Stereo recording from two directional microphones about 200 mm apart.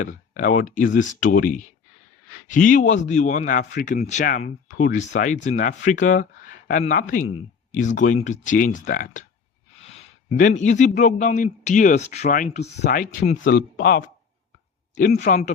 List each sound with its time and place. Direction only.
0.3 s speech: 40° left (ahead or behind)
12.8 s speech: 45° left (ahead or behind)